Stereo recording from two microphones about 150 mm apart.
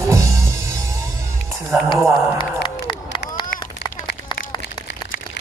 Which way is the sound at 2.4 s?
30° left (ahead or behind).